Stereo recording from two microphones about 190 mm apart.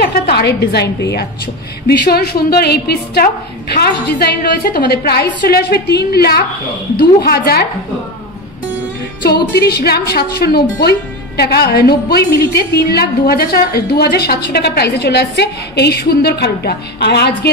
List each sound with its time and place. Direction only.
0.0 s a woman's voice: 60° left (ahead or behind)
9.2 s a woman's voice: 55° left (ahead or behind)